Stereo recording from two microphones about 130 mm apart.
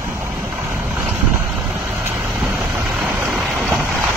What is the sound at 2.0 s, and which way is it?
Vehicle, 20° right (ahead or behind).